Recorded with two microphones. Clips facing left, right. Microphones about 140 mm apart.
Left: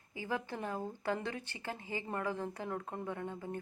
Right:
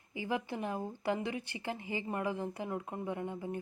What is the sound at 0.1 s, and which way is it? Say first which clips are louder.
Speech: right 3 dB; 15° right (ahead or behind).